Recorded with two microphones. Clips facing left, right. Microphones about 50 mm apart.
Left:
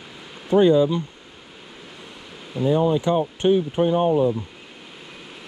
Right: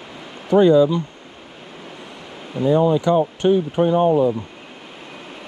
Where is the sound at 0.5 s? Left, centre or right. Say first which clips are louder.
Right 2 dB; right.